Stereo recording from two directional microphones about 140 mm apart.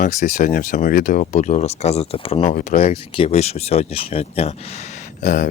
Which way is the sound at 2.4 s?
65° left (ahead or behind).